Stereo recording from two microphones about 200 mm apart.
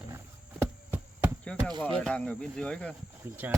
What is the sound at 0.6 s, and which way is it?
Hum, 10° right (ahead or behind).